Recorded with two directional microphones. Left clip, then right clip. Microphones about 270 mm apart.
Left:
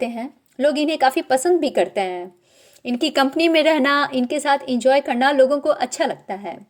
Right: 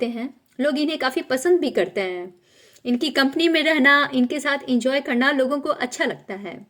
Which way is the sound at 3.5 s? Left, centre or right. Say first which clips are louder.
Left 3 dB; left.